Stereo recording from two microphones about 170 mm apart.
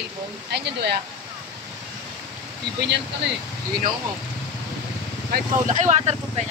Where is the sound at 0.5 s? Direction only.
80° right.